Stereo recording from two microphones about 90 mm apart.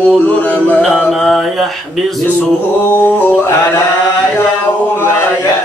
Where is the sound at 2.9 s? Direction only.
20° left (ahead or behind).